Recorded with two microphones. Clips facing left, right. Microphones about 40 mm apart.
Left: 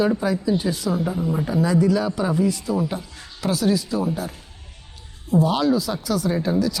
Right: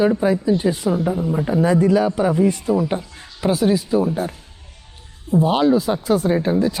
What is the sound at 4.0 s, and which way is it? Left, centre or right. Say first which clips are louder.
A man's voice: right 5 dB; right.